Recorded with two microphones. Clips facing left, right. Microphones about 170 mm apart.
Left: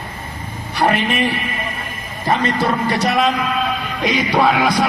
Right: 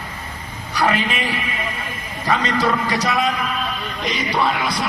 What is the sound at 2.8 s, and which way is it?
Music, 60° left (ahead or behind).